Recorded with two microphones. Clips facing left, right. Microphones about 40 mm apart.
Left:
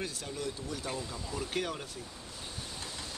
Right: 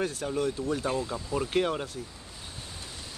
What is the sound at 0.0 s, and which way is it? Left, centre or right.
Speech, right.